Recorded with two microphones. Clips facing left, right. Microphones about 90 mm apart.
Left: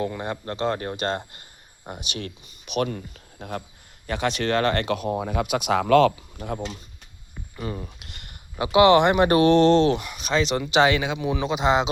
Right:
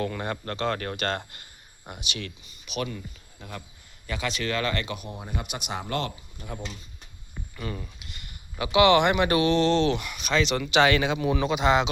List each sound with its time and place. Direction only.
0.0 s speech: 20° left (ahead or behind)
1.9 s speech: 40° left (ahead or behind); by 6.5 s 85° left
7.5 s speech: 25° left (ahead or behind)
8.0 s a sound: 60° left (ahead or behind)
8.5 s speech: 30° left (ahead or behind)
10.9 s speech: 10° left (ahead or behind)
11.4 s speech: 25° left (ahead or behind)